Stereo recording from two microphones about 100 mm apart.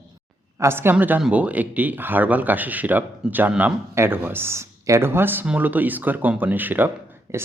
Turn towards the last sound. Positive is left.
turn(degrees=-25)  # may be behind; listen again after turning